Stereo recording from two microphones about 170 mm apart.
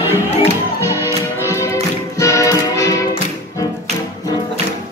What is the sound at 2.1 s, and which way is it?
Music, 20° left (ahead or behind).